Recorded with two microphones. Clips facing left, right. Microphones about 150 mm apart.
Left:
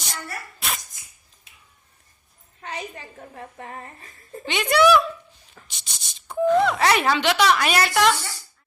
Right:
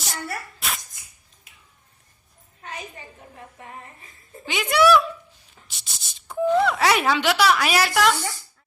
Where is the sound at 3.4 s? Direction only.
65° left (ahead or behind).